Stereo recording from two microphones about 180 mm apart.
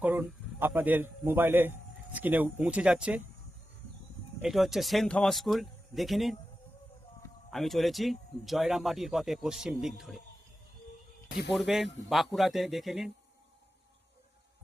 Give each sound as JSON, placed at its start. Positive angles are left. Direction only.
{"t": 0.0, "sound": "a man's voice", "side_deg": -10}
{"t": 4.4, "sound": "speech", "side_deg": 0}
{"t": 7.5, "sound": "speech", "side_deg": 0}
{"t": 11.3, "sound": "speech", "side_deg": 60}
{"t": 11.5, "sound": "speech", "side_deg": 0}